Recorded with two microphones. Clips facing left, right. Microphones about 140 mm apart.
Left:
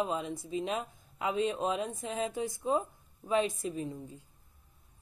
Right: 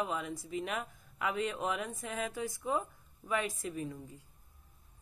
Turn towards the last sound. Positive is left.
turn(degrees=25)  # may be behind; listen again after turning